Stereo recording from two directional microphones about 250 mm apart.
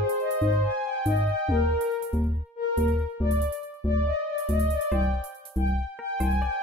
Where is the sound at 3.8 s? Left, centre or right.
Centre.